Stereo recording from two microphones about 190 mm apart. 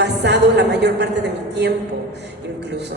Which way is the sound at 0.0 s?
65° right (ahead or behind).